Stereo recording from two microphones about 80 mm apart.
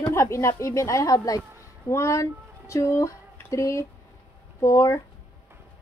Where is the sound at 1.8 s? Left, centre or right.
Left.